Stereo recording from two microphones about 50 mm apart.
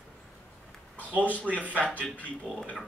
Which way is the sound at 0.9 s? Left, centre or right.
Left.